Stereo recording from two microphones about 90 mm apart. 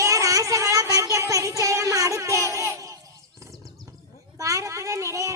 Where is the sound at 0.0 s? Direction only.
40° right (ahead or behind).